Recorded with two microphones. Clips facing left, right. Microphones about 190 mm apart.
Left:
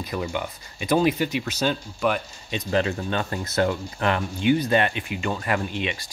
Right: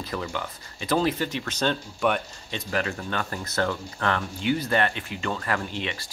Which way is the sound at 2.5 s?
20° left (ahead or behind).